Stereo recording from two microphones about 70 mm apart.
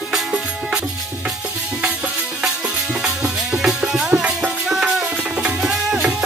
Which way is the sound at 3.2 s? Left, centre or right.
Centre.